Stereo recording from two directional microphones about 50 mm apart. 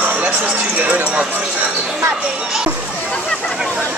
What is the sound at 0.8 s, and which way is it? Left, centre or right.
Speech, right.